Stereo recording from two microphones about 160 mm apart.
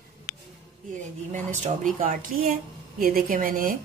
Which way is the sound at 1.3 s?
50° right (ahead or behind).